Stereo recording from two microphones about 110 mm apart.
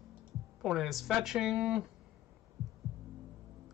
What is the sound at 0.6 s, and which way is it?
Speech, centre (ahead or behind).